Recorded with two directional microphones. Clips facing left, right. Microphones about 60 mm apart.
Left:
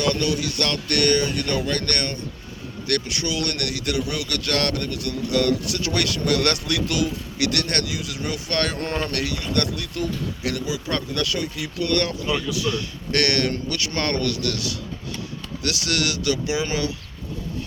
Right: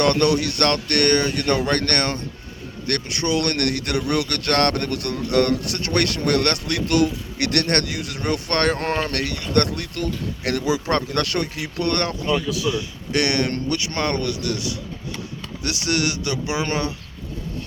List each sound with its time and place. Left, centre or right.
0.0 s speech: right
2.8 s speech: right
13.1 s speech: centre; by 16.9 s right